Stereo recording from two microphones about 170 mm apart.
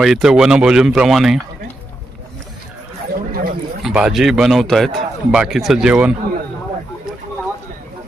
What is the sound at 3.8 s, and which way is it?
A man's voice, 5° right (ahead or behind).